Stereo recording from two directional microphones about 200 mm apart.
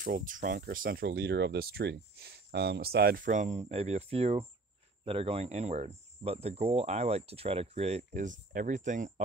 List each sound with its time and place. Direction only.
0.0 s speech: 40° right (ahead or behind)